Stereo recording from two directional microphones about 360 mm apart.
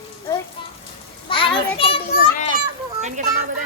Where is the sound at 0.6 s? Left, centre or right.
Centre.